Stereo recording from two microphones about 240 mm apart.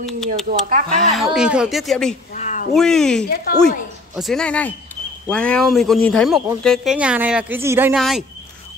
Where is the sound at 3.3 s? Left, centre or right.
Left.